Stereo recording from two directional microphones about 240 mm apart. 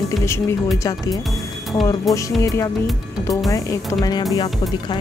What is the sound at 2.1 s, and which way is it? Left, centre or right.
Music, centre.